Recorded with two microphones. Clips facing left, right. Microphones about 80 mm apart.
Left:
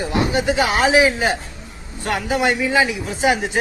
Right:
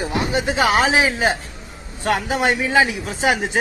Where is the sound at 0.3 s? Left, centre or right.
Right.